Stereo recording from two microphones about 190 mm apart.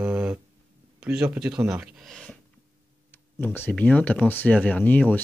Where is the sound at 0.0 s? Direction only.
5° right (ahead or behind).